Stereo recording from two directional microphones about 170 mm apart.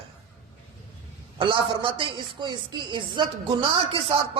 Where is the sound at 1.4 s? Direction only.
30° right (ahead or behind).